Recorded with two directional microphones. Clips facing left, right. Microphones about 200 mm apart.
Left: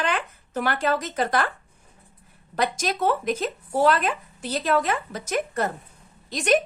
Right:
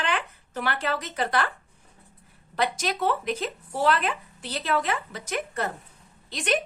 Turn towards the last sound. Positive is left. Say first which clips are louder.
# left 6 dB
turn(degrees=45)  # may be behind; listen again after turning